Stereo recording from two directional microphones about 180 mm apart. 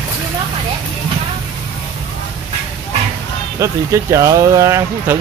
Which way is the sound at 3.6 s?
15° right (ahead or behind).